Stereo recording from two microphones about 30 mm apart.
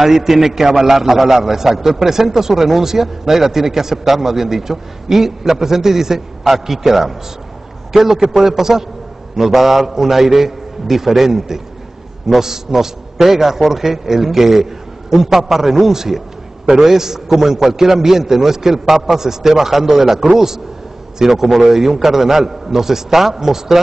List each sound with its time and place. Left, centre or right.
0.0 s a man's voice: centre